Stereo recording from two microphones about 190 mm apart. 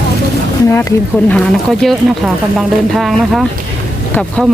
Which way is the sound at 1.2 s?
5° left (ahead or behind).